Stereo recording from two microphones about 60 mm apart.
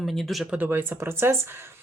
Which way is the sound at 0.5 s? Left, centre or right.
Right.